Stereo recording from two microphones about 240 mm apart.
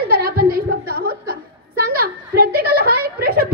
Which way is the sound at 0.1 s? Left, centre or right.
Right.